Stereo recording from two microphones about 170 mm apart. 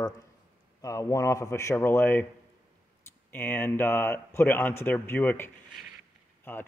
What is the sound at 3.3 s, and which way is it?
Speech, 10° left (ahead or behind).